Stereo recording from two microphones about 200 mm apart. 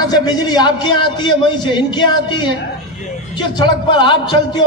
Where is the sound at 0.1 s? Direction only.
20° left (ahead or behind).